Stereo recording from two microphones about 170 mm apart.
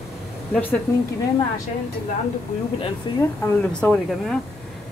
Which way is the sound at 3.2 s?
10° left (ahead or behind).